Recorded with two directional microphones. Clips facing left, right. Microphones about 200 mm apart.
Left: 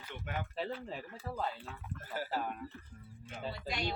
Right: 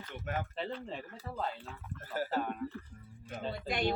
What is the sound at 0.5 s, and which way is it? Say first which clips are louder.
Speech: even; 5° left (ahead or behind).